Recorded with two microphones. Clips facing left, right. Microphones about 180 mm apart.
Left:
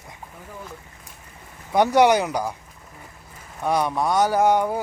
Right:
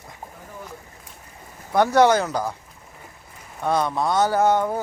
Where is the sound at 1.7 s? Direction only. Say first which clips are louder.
Even; 15° left (ahead or behind).